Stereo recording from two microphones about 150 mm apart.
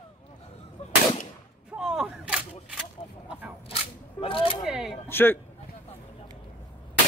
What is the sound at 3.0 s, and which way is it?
Speech, 40° left (ahead or behind).